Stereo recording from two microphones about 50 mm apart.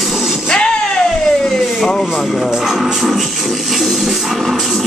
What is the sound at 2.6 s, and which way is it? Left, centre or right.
Music, centre.